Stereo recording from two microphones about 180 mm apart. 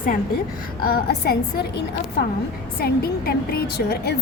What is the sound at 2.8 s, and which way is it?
A woman's voice, 60° left (ahead or behind).